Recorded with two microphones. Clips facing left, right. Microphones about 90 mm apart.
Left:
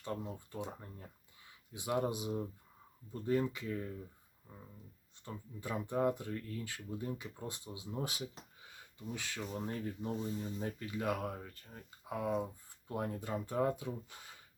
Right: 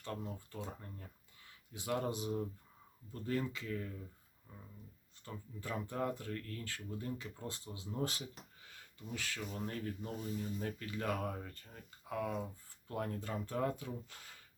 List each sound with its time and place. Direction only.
0.0 s speech: 10° left (ahead or behind)
5.2 s speech: 15° left (ahead or behind)
8.7 s a sound: 20° left (ahead or behind)
9.4 s speech: 30° left (ahead or behind)
10.7 s speech: 10° left (ahead or behind)
12.0 s speech: 20° left (ahead or behind)